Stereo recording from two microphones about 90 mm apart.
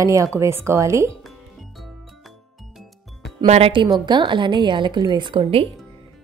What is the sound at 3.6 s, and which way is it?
Speech, 75° right (ahead or behind).